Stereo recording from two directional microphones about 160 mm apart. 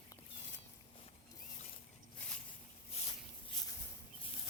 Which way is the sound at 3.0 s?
40° left (ahead or behind).